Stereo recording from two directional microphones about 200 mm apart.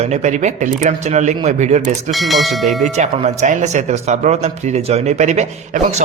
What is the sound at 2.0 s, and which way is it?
Speech, centre (ahead or behind).